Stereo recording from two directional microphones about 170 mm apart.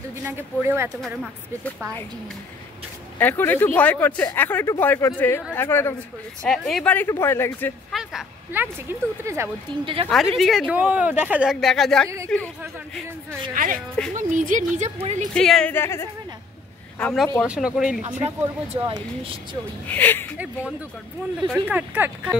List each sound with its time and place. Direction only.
0.2 s speech: 10° right (ahead or behind)
1.0 s speech: centre (ahead or behind)
3.2 s speech: 10° left (ahead or behind)
6.4 s speech: centre (ahead or behind)
7.9 s speech: centre (ahead or behind)
9.7 s speech: 30° right (ahead or behind)
10.0 s speech: centre (ahead or behind)
14.1 s speech: 50° right (ahead or behind)
15.3 s speech: 5° left (ahead or behind)
17.0 s speech: centre (ahead or behind)
18.9 s speech: 30° right (ahead or behind)
19.9 s speech: 10° left (ahead or behind)
21.5 s speech: 10° right (ahead or behind)